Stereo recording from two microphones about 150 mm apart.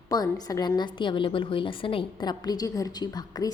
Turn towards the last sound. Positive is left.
turn(degrees=25)  # may be behind; listen again after turning